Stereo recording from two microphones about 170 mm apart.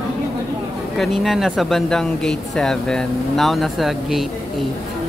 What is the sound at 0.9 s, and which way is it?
Speech, centre (ahead or behind).